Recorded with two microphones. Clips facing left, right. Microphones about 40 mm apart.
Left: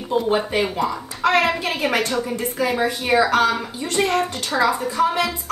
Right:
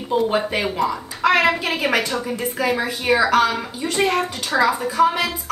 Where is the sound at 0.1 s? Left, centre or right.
Centre.